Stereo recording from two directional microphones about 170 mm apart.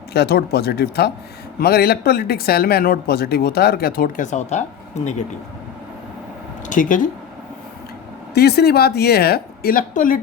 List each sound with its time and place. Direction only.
0.1 s speech: 70° left (ahead or behind); by 4.6 s 45° left (ahead or behind)
6.7 s speech: 50° left (ahead or behind)
8.3 s speech: 70° left (ahead or behind); by 10.2 s 50° left (ahead or behind)